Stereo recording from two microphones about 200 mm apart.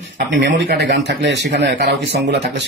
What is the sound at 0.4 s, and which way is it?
Speech, 60° right (ahead or behind).